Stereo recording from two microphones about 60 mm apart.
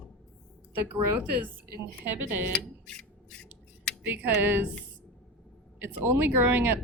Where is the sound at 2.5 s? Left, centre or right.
Centre.